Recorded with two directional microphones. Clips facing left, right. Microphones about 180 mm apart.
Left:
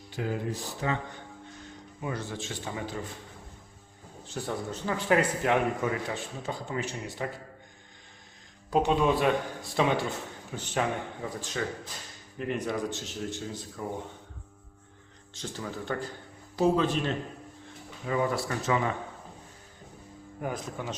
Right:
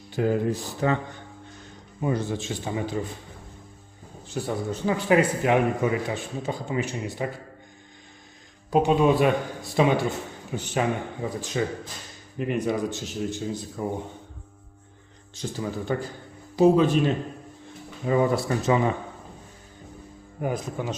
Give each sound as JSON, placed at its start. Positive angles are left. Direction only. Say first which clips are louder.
{"t": 0.2, "sound": "a man's voice", "louder": "right 8 dB", "side_deg": -50}
{"t": 2.0, "sound": "a man's voice", "louder": "right 8 dB", "side_deg": -20}
{"t": 4.4, "sound": "speech", "louder": "right 5 dB", "side_deg": -5}
{"t": 8.7, "sound": "speech", "louder": "right 5 dB", "side_deg": -10}
{"t": 15.4, "sound": "speech", "louder": "right 6 dB", "side_deg": -10}
{"t": 18.0, "sound": "a man's voice", "louder": "right 6 dB", "side_deg": -25}
{"t": 20.4, "sound": "speech", "louder": "right 6 dB", "side_deg": -15}